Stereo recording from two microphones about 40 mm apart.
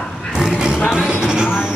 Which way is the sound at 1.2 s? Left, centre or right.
Centre.